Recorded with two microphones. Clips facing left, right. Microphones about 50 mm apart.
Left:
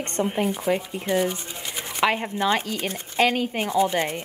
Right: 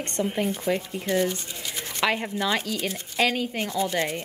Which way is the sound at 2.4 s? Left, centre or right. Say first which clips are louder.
Left 3 dB; left.